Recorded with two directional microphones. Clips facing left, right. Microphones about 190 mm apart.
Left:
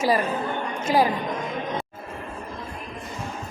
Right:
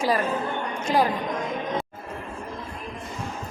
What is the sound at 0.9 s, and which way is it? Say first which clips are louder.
Speech: left 2 dB; 5° left (ahead or behind).